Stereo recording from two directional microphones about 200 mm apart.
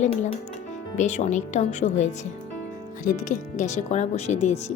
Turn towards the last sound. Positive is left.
turn(degrees=35)  # may be behind; listen again after turning